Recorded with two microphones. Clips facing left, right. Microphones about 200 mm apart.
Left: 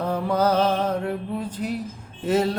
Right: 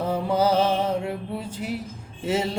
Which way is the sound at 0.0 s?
10° right (ahead or behind).